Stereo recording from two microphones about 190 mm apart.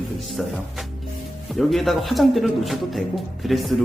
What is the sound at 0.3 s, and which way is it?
A man's voice, centre (ahead or behind).